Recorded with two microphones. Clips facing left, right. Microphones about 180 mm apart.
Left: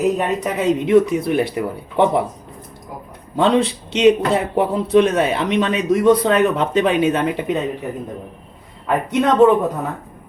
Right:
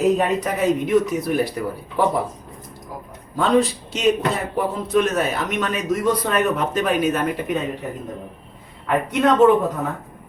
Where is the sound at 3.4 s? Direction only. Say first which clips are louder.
Left 2 dB; 25° left (ahead or behind).